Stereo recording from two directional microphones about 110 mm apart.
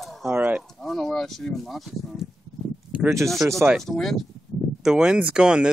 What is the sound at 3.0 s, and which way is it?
Speech, 25° right (ahead or behind).